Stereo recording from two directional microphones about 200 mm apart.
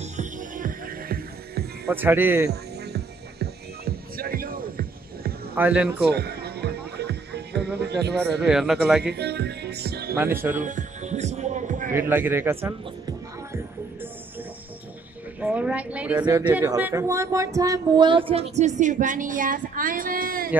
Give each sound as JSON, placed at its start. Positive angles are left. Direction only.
{"t": 0.0, "sound": "music", "side_deg": -40}
{"t": 1.9, "sound": "a man's voice", "side_deg": -10}
{"t": 2.9, "sound": "music", "side_deg": -50}
{"t": 5.5, "sound": "a man's voice", "side_deg": -5}
{"t": 6.1, "sound": "music", "side_deg": -55}
{"t": 8.5, "sound": "a man's voice", "side_deg": -5}
{"t": 9.0, "sound": "music", "side_deg": -55}
{"t": 10.1, "sound": "a man's voice", "side_deg": -10}
{"t": 10.5, "sound": "music", "side_deg": -40}
{"t": 11.9, "sound": "a man's voice", "side_deg": -10}
{"t": 15.4, "sound": "a man's voice", "side_deg": -5}